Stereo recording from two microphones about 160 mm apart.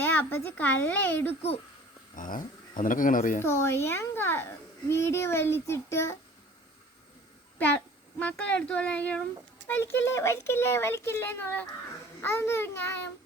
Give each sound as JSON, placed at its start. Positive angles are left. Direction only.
{"t": 0.0, "sound": "speech", "side_deg": 15}
{"t": 2.1, "sound": "speech", "side_deg": 55}
{"t": 3.4, "sound": "a child's voice", "side_deg": 15}
{"t": 8.2, "sound": "a child's voice", "side_deg": 10}